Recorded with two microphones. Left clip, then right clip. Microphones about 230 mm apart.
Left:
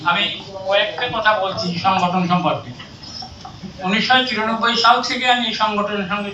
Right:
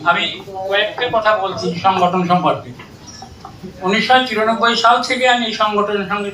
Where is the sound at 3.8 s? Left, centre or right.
Right.